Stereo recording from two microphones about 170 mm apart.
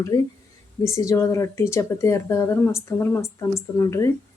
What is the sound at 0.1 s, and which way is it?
Speech, 20° left (ahead or behind).